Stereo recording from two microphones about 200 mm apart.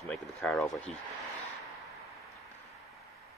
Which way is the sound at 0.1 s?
Centre (ahead or behind).